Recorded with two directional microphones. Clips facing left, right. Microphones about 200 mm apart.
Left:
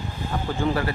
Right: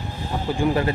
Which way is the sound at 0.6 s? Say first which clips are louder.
Right 4 dB; 20° right (ahead or behind).